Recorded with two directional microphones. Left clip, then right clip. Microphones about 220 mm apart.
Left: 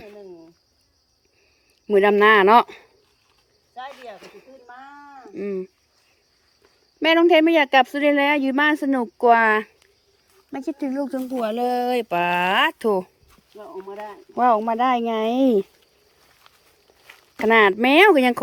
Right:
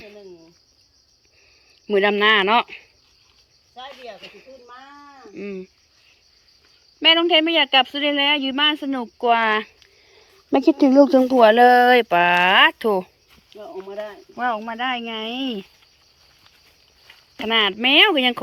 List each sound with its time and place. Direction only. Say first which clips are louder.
0.0 s cricket: even; 15° left (ahead or behind)
1.9 s speech: left 2 dB; 15° left (ahead or behind)
3.8 s cricket: left 1 dB; 10° left (ahead or behind)
4.2 s speech: right 3 dB; 15° left (ahead or behind)
7.0 s speech: even; 20° left (ahead or behind)
10.5 s speech: right 12 dB; 25° right (ahead or behind)
11.4 s speech: right 10 dB; 5° left (ahead or behind)
14.3 s speech: left 6 dB; 25° left (ahead or behind)
17.1 s speech: left 4 dB; 25° left (ahead or behind)